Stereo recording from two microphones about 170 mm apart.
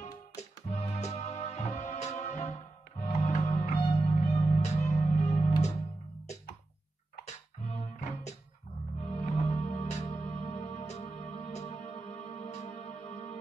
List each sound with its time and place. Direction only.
0.0 s music: 40° left (ahead or behind)
7.2 s music: 40° left (ahead or behind)